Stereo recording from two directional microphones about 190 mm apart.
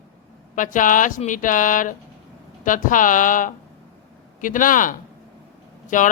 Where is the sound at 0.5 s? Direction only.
45° left (ahead or behind).